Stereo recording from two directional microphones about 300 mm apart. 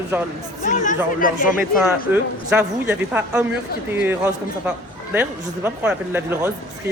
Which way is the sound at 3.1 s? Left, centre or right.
Centre.